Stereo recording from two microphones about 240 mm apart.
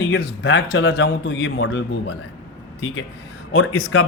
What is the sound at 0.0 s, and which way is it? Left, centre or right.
A man's voice, left.